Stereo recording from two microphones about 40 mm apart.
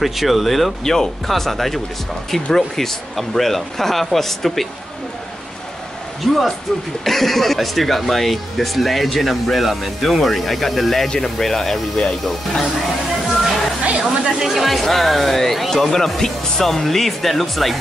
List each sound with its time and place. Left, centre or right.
0.0 s speech: centre
0.8 s speech: centre
6.2 s speech: centre
13.9 s speech: centre
14.5 s speech: centre